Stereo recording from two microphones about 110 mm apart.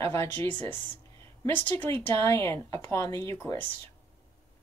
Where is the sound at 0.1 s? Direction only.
20° left (ahead or behind).